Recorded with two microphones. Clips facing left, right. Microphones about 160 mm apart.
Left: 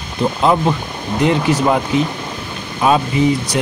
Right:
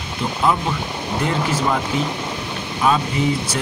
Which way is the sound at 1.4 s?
15° left (ahead or behind).